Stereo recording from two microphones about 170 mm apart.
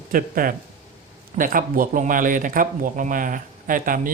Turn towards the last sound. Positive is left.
turn(degrees=-55)  # may be behind; listen again after turning